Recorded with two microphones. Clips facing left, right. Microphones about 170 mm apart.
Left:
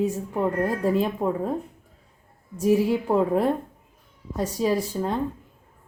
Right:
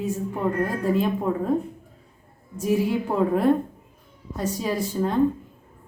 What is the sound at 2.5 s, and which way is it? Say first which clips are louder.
Speech: left 2 dB; 35° left (ahead or behind).